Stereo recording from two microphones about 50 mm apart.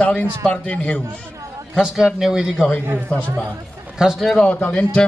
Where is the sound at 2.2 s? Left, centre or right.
Centre.